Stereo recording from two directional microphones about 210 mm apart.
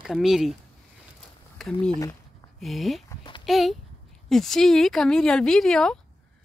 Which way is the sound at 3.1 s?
25° left (ahead or behind).